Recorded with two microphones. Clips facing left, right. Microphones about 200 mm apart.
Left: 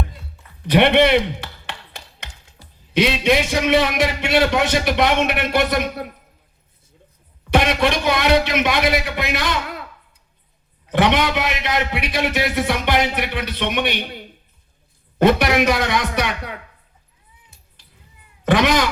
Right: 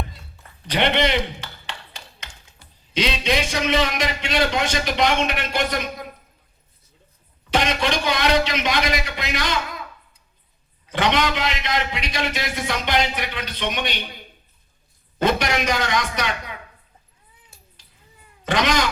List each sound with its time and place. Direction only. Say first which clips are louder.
0.6 s a man's voice: left 7 dB; 60° left (ahead or behind)
2.6 s a sound: left 5 dB; 35° left (ahead or behind)
2.9 s a man's voice: left 5 dB; 60° left (ahead or behind)
7.5 s a man's voice: left 4 dB; 60° left (ahead or behind)
10.8 s a man's voice: left 4 dB; 65° left (ahead or behind)
15.2 s a man's voice: left 6 dB; 65° left (ahead or behind)
18.5 s a man's voice: left 4 dB; 65° left (ahead or behind)